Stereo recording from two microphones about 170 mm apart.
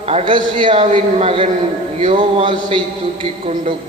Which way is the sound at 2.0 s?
35° right (ahead or behind).